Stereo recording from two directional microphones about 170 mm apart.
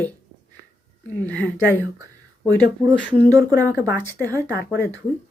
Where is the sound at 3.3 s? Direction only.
20° right (ahead or behind).